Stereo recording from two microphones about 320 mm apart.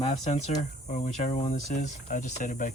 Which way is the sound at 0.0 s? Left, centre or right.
Centre.